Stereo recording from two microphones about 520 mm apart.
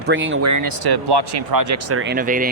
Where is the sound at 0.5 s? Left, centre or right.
Right.